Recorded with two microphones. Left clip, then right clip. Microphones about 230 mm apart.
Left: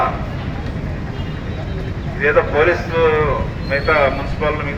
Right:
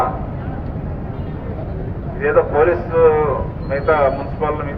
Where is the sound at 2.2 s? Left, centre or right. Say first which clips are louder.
Even; left.